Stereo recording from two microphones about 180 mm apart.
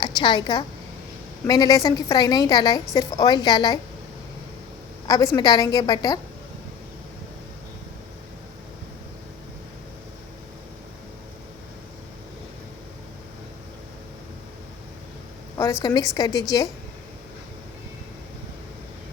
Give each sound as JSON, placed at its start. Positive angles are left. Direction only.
{"t": 0.0, "sound": "a woman's voice", "side_deg": 25}
{"t": 5.0, "sound": "a woman's voice", "side_deg": 20}
{"t": 15.5, "sound": "a woman's voice", "side_deg": 20}